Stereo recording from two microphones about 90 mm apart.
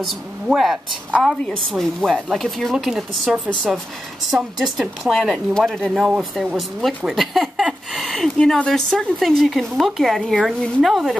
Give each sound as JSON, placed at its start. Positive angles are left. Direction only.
{"t": 0.0, "sound": "speech", "side_deg": 0}